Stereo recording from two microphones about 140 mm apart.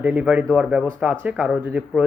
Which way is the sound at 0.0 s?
10° right (ahead or behind).